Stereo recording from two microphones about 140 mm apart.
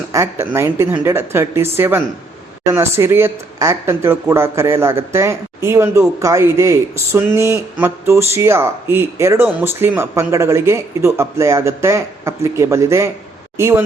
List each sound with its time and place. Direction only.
0.1 s speech: 20° right (ahead or behind)